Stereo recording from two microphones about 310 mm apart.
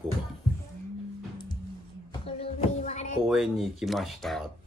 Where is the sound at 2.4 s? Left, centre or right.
Left.